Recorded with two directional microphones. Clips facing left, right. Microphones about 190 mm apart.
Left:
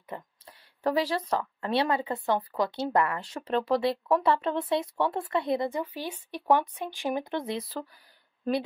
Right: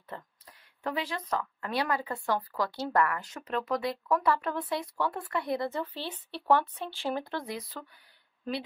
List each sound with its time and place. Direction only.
0.1 s a woman's voice: 15° left (ahead or behind)
0.5 s speech: 35° left (ahead or behind)